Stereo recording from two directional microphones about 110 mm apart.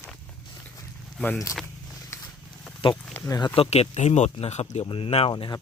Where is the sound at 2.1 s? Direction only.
25° left (ahead or behind).